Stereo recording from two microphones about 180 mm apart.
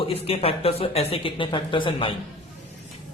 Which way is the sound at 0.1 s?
30° left (ahead or behind).